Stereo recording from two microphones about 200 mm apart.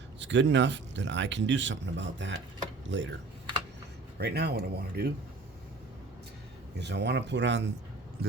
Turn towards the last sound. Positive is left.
turn(degrees=-65)  # may be behind; listen again after turning